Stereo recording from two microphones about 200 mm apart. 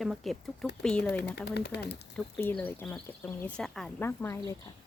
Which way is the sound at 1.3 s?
55° left (ahead or behind).